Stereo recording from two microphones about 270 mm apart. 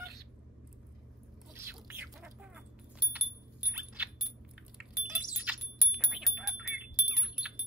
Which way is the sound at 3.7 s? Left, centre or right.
Centre.